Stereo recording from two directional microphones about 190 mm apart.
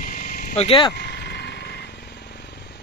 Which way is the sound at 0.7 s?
25° left (ahead or behind).